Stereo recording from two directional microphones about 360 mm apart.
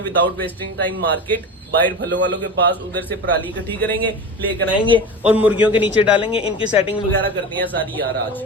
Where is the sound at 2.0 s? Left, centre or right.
Right.